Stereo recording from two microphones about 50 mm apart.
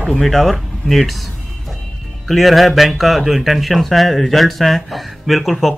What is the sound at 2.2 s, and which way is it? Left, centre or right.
A man's voice, centre.